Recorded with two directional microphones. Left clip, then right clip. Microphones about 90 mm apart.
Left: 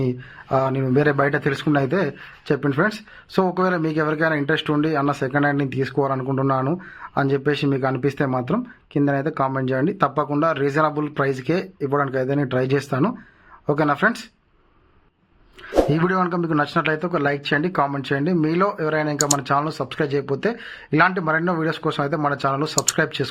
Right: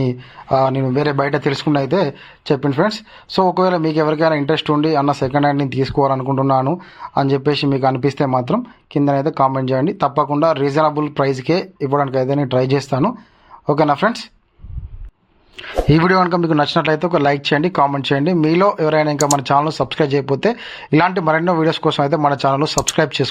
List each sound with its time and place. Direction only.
0.0 s speech: 20° right (ahead or behind)
15.9 s speech: 50° right (ahead or behind); by 23.3 s 30° right (ahead or behind)